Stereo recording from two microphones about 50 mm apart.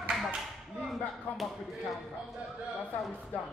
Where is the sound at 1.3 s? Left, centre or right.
Centre.